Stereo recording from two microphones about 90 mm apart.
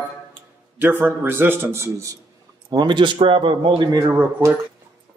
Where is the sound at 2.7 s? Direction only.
60° right (ahead or behind).